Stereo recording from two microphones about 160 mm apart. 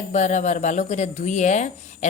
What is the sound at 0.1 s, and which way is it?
Speech, 50° left (ahead or behind).